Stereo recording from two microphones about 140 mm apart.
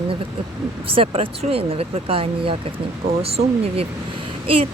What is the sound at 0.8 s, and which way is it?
Speech, 40° right (ahead or behind).